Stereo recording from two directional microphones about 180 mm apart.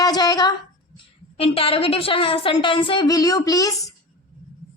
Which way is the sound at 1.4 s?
30° left (ahead or behind).